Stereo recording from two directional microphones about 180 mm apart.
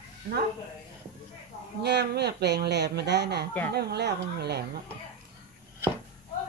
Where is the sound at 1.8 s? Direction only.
65° right (ahead or behind).